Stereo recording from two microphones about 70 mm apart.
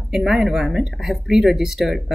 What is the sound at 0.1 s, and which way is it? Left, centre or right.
Speech, centre.